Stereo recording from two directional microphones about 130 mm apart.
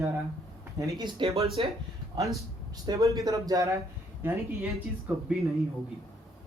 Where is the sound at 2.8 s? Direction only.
25° right (ahead or behind).